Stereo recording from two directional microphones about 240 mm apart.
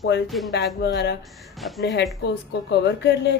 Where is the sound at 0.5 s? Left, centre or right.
Left.